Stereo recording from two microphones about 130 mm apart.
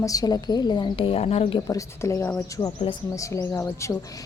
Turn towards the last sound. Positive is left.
turn(degrees=25)  # may be behind; listen again after turning